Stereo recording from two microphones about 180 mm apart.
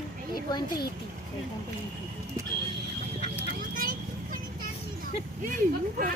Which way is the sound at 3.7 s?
50° right (ahead or behind).